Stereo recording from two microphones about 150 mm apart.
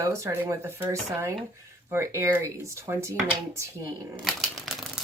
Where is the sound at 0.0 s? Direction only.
20° right (ahead or behind).